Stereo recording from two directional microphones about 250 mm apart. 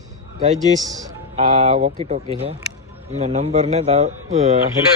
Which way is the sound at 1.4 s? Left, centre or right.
Right.